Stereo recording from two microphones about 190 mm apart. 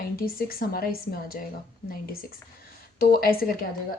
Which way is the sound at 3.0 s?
50° left (ahead or behind).